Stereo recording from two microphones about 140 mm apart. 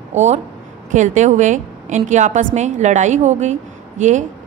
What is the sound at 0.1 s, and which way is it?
A woman's voice, 55° right (ahead or behind).